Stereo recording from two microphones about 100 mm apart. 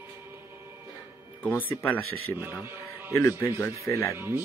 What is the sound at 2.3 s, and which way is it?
Speech, 20° right (ahead or behind).